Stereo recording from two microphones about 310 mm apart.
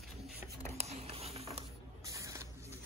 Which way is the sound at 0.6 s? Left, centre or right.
Centre.